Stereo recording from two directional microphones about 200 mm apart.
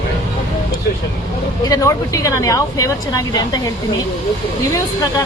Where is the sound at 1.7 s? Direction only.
15° left (ahead or behind).